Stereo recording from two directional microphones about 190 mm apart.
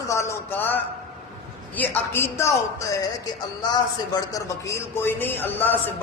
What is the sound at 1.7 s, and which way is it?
Speech, 10° left (ahead or behind).